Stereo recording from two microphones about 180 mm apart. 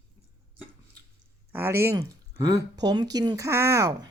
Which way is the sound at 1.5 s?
15° right (ahead or behind).